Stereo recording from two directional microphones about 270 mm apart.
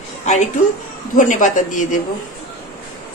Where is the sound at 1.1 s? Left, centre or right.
Left.